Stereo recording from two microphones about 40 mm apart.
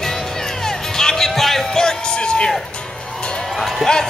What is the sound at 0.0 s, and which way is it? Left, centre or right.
Music, centre.